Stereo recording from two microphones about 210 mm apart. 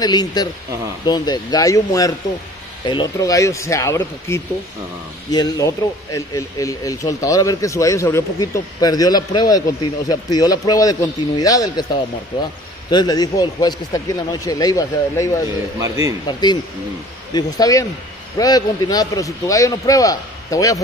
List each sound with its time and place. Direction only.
0.0 s speech: 20° left (ahead or behind)
12.9 s speech: 20° left (ahead or behind)
15.8 s speech: 15° right (ahead or behind)
16.3 s speech: 20° left (ahead or behind)